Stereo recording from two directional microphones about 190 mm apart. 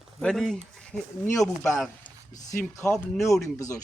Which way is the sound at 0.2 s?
5° left (ahead or behind).